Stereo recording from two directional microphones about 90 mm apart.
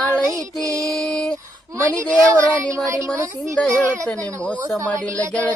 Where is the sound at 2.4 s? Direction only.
35° right (ahead or behind).